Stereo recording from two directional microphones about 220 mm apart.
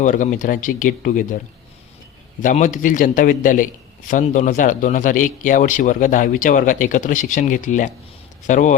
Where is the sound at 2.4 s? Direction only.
35° left (ahead or behind).